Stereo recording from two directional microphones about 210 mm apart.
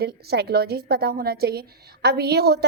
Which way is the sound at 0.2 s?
50° right (ahead or behind).